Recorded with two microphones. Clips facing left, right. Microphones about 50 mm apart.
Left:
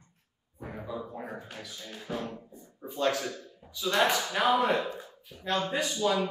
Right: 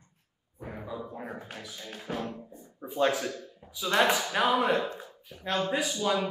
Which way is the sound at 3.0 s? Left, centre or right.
Centre.